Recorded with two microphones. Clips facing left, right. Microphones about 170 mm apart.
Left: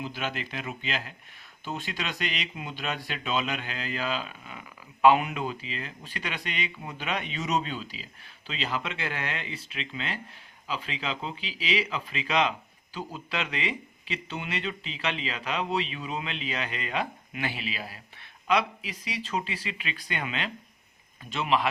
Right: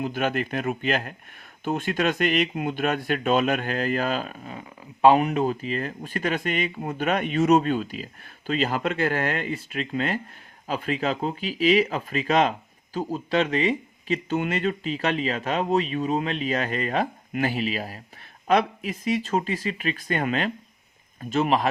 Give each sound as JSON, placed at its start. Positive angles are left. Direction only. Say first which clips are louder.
{"t": 0.0, "sound": "speech", "louder": "right 8 dB", "side_deg": -50}